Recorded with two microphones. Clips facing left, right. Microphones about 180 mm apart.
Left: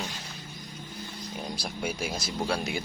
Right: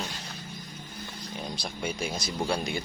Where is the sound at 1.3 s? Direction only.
5° left (ahead or behind).